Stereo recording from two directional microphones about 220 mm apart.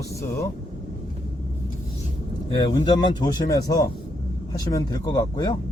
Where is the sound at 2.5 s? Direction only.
20° left (ahead or behind).